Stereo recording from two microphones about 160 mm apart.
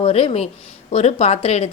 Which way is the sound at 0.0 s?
40° left (ahead or behind).